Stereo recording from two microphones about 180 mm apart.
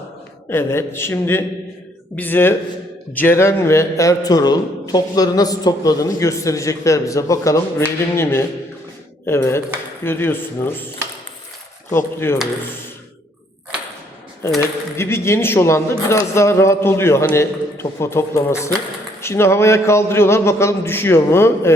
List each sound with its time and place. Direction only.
0.5 s a man's voice: 15° left (ahead or behind)
11.9 s a man's voice: 15° left (ahead or behind)
14.4 s a man's voice: 15° left (ahead or behind)